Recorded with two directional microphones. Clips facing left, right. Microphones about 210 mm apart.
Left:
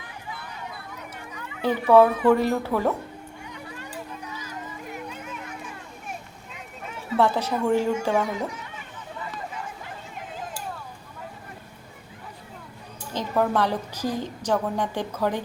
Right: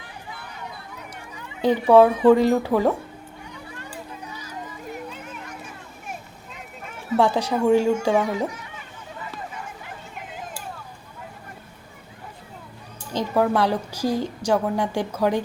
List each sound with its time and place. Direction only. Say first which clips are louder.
1.6 s a woman's voice: right 2 dB; 15° right (ahead or behind)
7.2 s a woman's voice: right 2 dB; 15° right (ahead or behind)
13.1 s a woman's voice: right 3 dB; 10° right (ahead or behind)